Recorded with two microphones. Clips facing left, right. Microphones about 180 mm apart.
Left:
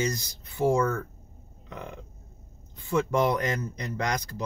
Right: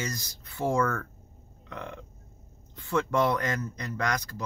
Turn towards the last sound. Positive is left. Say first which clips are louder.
# left 1 dB
turn(degrees=20)  # may be behind; listen again after turning